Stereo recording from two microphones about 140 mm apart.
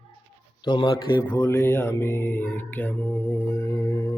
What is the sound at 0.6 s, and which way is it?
Speech, 30° left (ahead or behind).